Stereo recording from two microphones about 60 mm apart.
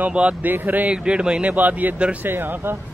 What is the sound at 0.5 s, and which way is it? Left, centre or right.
Speech, right.